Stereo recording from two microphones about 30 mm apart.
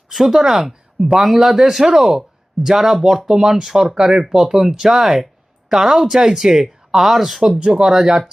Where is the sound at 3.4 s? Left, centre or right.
Right.